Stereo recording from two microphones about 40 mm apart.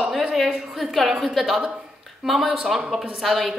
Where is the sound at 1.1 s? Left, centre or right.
Centre.